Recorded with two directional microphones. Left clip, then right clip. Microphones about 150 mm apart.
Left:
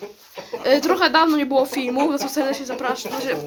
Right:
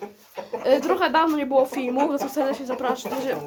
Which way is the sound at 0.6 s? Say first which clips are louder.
Left 3 dB; 5° left (ahead or behind).